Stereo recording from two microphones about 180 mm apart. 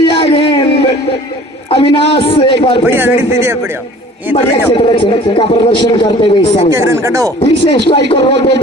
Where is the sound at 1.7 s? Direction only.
30° left (ahead or behind).